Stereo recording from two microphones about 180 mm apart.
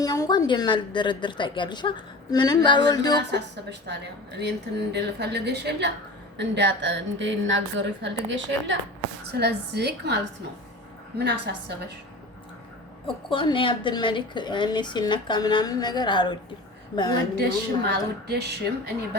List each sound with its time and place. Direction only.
0.0 s speech: 20° left (ahead or behind)
3.3 s a woman's voice: 70° right (ahead or behind); by 8.8 s 90° right
9.4 s a woman's voice: 65° right (ahead or behind)
11.2 s a woman's voice: 65° right (ahead or behind)
13.3 s speech: 25° left (ahead or behind)
17.3 s a woman's voice: 65° right (ahead or behind)